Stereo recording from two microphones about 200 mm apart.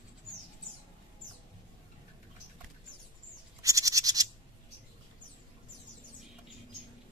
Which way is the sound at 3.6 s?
15° right (ahead or behind).